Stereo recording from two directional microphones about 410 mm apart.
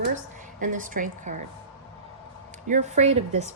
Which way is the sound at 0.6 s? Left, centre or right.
Centre.